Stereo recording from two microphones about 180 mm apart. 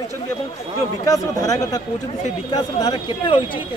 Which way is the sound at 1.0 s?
20° left (ahead or behind).